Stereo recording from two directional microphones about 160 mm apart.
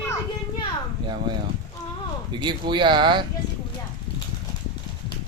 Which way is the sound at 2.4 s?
30° right (ahead or behind).